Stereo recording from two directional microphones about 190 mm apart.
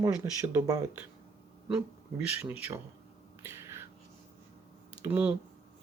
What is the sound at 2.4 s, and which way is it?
Speech, 10° right (ahead or behind).